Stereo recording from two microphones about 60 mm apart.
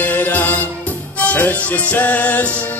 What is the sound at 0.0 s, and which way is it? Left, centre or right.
Music, left.